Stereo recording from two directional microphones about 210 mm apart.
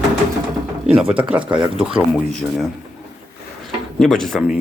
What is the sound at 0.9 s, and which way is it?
Speech, 5° right (ahead or behind).